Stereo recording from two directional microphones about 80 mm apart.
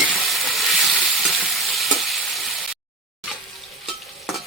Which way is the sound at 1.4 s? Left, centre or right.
Centre.